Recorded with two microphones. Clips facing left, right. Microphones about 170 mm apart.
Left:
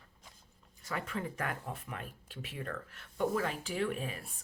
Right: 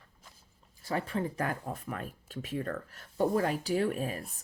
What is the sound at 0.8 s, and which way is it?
Speech, 35° right (ahead or behind).